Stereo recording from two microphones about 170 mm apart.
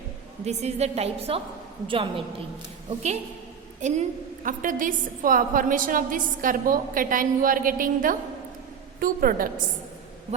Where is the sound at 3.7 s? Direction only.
45° right (ahead or behind).